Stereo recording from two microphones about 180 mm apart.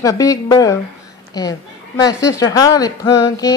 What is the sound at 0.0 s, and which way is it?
Speech, 20° left (ahead or behind).